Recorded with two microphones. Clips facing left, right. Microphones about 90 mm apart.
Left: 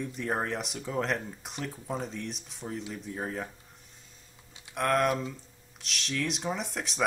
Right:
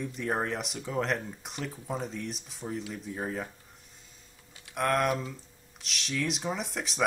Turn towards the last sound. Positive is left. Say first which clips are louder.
# right 1 dB
turn(degrees=0)  # may be behind; listen again after turning